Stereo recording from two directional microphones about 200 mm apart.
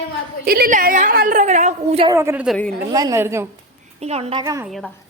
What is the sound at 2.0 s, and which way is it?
A woman's voice, 15° right (ahead or behind).